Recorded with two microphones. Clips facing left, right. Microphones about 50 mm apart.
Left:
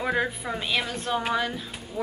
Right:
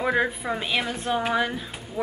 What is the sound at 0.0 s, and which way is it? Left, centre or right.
Speech, centre.